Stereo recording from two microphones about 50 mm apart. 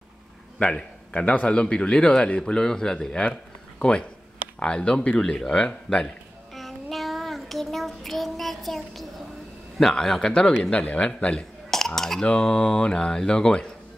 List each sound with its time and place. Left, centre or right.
0.6 s a man's voice: centre
1.1 s speech: left
6.5 s child singing: centre
9.8 s speech: centre
10.6 s speech: left
11.7 s speech: centre
12.3 s speech: centre